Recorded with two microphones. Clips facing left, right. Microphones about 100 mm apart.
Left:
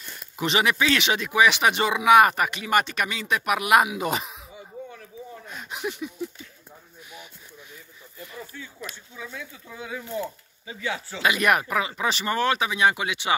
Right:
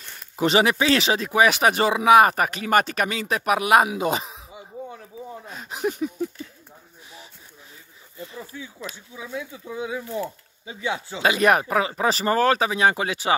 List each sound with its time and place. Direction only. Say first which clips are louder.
0.4 s speech: right 4 dB; 35° right (ahead or behind)
4.8 s a sound: right 3 dB; 20° right (ahead or behind)
5.5 s a sound: right 5 dB; 35° right (ahead or behind)
8.2 s speech: right 3 dB; 25° right (ahead or behind)
9.1 s speech: right 5 dB; 15° right (ahead or behind)
11.2 s speech: right 3 dB; 30° right (ahead or behind)